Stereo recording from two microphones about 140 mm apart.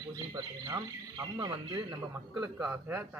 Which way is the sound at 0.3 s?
25° right (ahead or behind).